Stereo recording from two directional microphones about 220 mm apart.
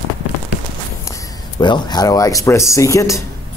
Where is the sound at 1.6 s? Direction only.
20° left (ahead or behind).